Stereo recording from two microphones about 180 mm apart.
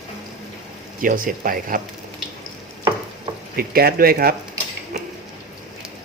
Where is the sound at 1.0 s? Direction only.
50° right (ahead or behind).